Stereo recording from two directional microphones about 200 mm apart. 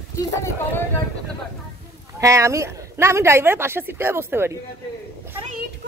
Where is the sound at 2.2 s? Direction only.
15° right (ahead or behind).